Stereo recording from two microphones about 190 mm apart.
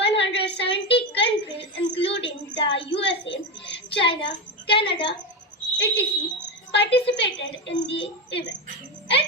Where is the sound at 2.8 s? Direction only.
70° left (ahead or behind).